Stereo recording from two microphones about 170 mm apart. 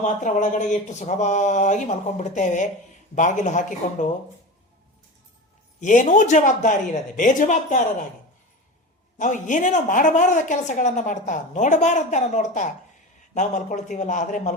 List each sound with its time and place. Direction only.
0.0 s a woman's voice: 45° left (ahead or behind)
5.8 s a woman's voice: 45° left (ahead or behind)
9.1 s a woman's voice: 45° left (ahead or behind)